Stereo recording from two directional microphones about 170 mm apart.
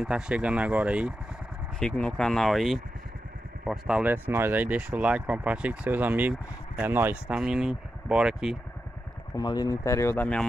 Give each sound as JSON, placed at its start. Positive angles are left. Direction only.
{"t": 0.0, "sound": "speech", "side_deg": -5}
{"t": 1.8, "sound": "speech", "side_deg": 5}
{"t": 9.3, "sound": "speech", "side_deg": 25}